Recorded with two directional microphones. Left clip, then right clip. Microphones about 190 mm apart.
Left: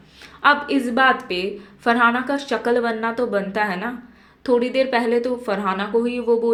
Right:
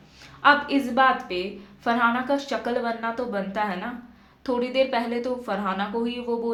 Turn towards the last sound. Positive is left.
turn(degrees=15)  # may be behind; listen again after turning